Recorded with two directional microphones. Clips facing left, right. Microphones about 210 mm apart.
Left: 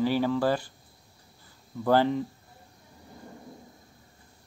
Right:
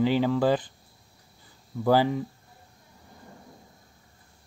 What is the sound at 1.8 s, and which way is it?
Speech, 10° right (ahead or behind).